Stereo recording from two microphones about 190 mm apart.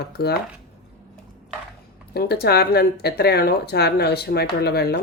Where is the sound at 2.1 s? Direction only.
55° left (ahead or behind).